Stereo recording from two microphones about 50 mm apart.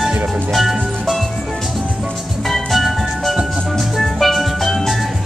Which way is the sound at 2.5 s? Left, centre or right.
Centre.